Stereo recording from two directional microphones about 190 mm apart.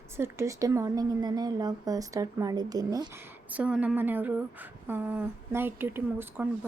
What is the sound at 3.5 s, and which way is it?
Speech, 5° right (ahead or behind).